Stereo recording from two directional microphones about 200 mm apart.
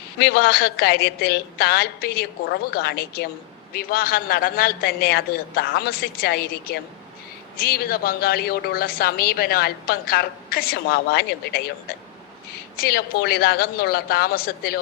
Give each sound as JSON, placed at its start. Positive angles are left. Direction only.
{"t": 0.2, "sound": "speech", "side_deg": 55}
{"t": 12.7, "sound": "speech", "side_deg": 50}